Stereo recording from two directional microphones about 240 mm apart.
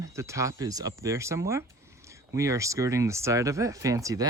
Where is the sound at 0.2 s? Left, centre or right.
Centre.